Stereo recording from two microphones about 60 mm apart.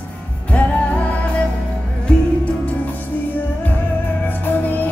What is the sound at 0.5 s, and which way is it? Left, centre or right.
Music, left.